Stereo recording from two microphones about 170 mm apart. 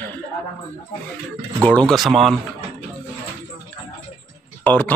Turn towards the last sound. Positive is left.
turn(degrees=10)  # may be behind; listen again after turning